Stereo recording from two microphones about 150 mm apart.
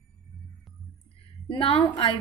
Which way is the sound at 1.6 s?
40° left (ahead or behind).